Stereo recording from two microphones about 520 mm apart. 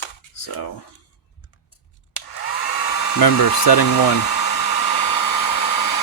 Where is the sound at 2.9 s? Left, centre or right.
Left.